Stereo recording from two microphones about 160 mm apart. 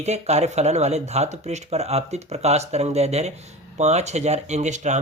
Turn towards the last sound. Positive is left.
turn(degrees=-45)  # may be behind; listen again after turning